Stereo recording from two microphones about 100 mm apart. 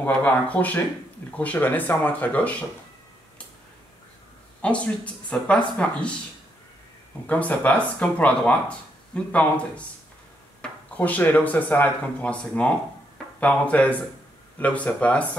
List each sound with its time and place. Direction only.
0.0 s speech: 15° left (ahead or behind)
4.6 s speech: 10° left (ahead or behind)
7.2 s speech: 15° left (ahead or behind)